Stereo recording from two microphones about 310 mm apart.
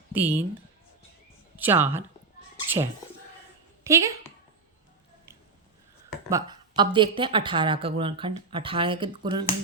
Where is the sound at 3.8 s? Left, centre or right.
Centre.